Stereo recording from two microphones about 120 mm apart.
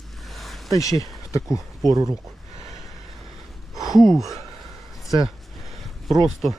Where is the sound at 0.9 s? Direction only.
25° left (ahead or behind).